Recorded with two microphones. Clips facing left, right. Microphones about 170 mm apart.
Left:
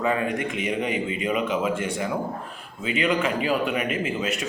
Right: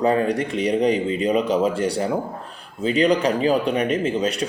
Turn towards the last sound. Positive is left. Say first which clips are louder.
# right 5 dB
turn(degrees=-35)  # may be behind; listen again after turning